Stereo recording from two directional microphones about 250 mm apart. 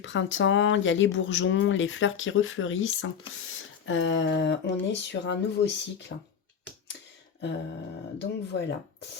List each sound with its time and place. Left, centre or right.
0.0 s speech: left
8.2 s speech: left